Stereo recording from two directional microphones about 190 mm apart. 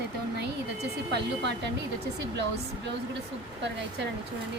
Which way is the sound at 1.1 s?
65° right (ahead or behind).